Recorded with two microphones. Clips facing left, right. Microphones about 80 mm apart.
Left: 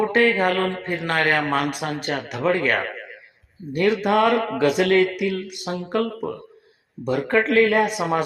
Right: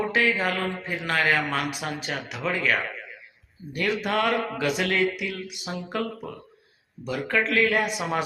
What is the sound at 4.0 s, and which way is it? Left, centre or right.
Speech, left.